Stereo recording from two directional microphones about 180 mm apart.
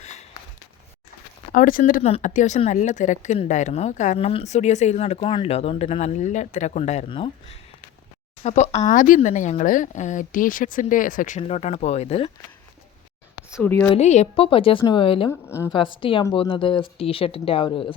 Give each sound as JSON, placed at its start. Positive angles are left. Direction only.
{"t": 1.5, "sound": "speech", "side_deg": 50}
{"t": 2.0, "sound": "speech", "side_deg": 40}
{"t": 13.6, "sound": "a woman's voice", "side_deg": 10}
{"t": 13.9, "sound": "speech", "side_deg": 40}
{"t": 15.3, "sound": "a woman's voice", "side_deg": 15}
{"t": 15.7, "sound": "speech", "side_deg": 30}